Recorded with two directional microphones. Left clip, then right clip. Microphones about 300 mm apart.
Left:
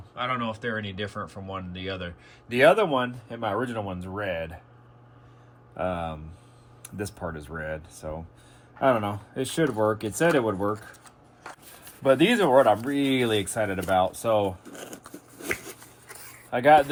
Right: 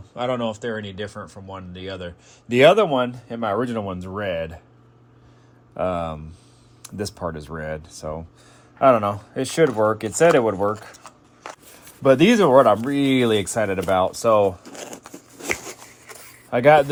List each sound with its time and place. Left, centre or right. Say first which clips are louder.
0.2 s speech: right 5 dB; centre
2.5 s speech: right 5 dB; right
5.7 s speech: right 5 dB; right
12.0 s speech: right 5 dB; right
16.5 s speech: right 4 dB; right